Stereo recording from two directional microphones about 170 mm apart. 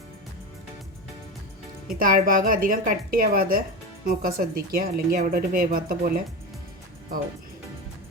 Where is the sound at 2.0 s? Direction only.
55° right (ahead or behind).